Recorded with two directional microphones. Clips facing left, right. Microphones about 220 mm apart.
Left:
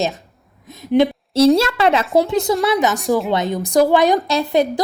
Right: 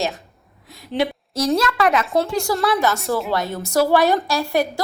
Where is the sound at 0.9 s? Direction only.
25° left (ahead or behind).